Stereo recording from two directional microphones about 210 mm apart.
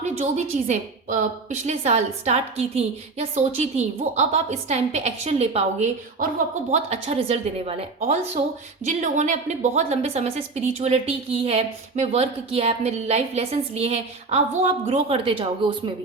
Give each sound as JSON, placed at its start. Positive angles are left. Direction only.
{"t": 0.0, "sound": "a woman's voice", "side_deg": -35}